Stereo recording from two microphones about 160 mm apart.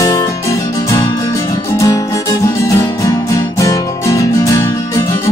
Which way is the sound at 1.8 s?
20° left (ahead or behind).